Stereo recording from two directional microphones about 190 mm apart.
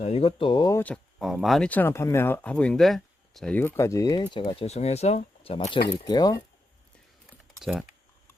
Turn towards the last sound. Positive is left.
turn(degrees=-5)  # may be behind; listen again after turning